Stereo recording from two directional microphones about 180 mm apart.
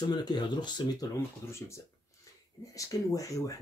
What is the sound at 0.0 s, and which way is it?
Speech, 25° left (ahead or behind).